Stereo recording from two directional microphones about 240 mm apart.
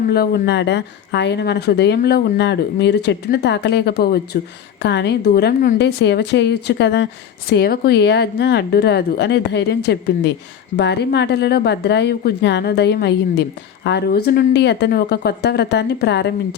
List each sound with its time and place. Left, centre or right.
0.1 s speech: left